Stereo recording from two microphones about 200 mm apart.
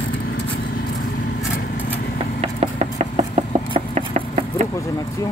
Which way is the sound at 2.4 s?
30° right (ahead or behind).